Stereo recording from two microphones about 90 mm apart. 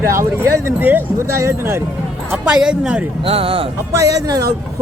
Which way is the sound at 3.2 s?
90° right.